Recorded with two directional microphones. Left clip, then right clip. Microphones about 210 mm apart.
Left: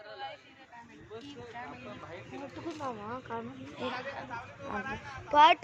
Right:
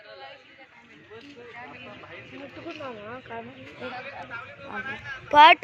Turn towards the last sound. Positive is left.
turn(degrees=-20)  # may be behind; listen again after turning